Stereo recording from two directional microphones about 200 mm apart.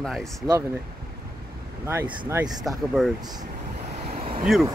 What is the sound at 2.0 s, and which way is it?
Speech, 15° right (ahead or behind).